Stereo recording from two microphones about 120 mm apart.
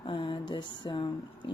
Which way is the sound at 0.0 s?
45° left (ahead or behind).